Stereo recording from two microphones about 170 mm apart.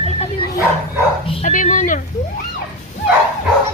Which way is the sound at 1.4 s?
50° left (ahead or behind).